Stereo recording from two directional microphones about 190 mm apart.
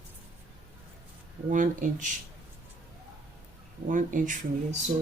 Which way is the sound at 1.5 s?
45° right (ahead or behind).